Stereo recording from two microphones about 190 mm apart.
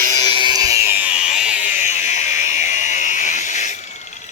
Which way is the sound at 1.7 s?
40° left (ahead or behind).